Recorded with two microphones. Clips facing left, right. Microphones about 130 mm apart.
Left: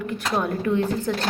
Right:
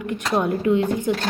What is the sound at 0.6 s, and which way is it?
Speech, 15° right (ahead or behind).